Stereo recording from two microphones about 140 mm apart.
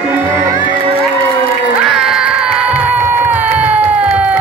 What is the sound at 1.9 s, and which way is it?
Crowd, 5° right (ahead or behind).